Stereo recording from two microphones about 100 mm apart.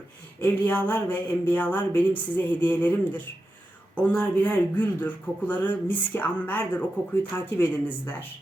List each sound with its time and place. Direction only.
0.4 s speech: 15° left (ahead or behind)